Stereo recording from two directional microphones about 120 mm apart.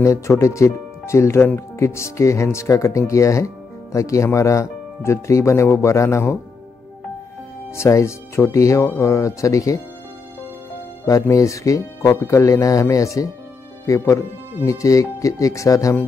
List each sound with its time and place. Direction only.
0.0 s speech: 25° left (ahead or behind)
7.7 s speech: 25° left (ahead or behind)
11.1 s speech: 30° left (ahead or behind)